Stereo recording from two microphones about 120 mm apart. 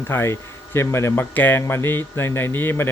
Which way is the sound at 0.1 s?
20° left (ahead or behind).